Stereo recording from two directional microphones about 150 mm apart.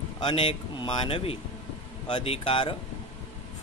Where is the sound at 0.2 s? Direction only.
35° left (ahead or behind).